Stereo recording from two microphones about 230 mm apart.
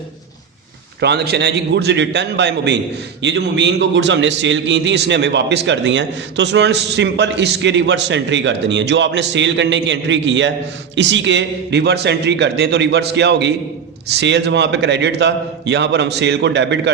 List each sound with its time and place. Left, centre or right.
1.0 s a man's voice: right